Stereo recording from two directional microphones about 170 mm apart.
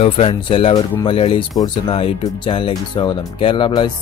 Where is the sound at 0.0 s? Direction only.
35° left (ahead or behind).